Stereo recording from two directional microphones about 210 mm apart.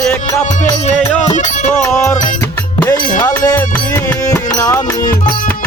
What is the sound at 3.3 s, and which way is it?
Music, 15° left (ahead or behind).